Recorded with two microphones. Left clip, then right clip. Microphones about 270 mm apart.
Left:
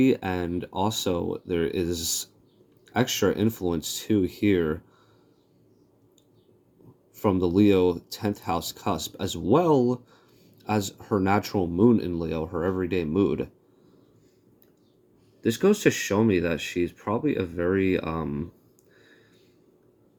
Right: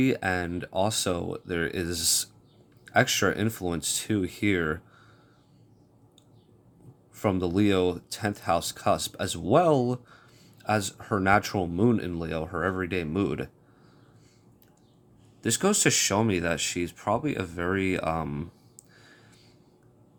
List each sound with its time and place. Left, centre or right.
0.0 s speech: centre
7.2 s speech: centre
15.4 s speech: centre